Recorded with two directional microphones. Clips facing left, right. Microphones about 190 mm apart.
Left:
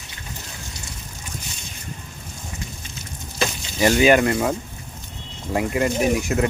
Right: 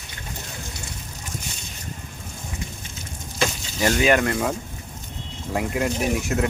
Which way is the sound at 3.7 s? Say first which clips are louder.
Left 4 dB; 5° left (ahead or behind).